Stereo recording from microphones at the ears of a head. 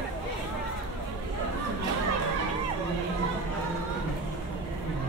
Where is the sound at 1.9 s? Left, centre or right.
Right.